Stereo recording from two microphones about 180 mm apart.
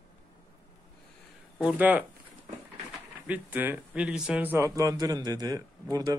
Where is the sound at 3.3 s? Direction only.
10° right (ahead or behind).